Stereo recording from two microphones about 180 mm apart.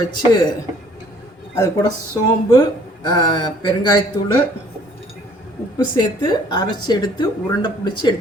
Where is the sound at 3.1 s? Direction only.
20° left (ahead or behind).